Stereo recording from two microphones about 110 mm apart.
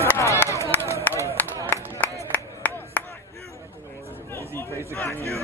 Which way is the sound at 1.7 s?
15° left (ahead or behind).